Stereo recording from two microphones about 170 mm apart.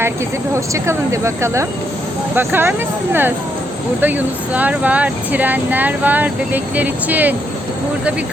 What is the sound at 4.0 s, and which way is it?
Speech, 10° right (ahead or behind).